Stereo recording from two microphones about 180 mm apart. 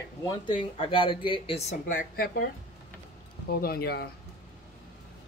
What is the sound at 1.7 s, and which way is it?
Speech, 50° left (ahead or behind).